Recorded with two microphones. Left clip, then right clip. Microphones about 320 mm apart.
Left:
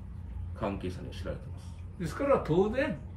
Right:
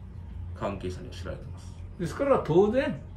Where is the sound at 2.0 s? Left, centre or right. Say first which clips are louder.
Right 3 dB; right.